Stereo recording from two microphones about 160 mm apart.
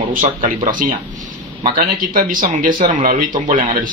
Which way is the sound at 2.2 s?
60° right (ahead or behind).